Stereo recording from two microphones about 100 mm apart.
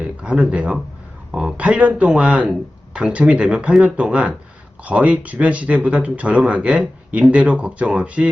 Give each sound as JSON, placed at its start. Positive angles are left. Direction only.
{"t": 0.0, "sound": "speech", "side_deg": -10}